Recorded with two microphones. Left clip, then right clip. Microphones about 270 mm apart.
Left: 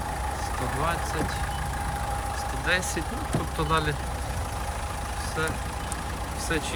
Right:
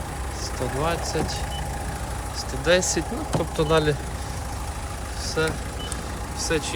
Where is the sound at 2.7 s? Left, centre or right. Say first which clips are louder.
Right 7 dB; centre.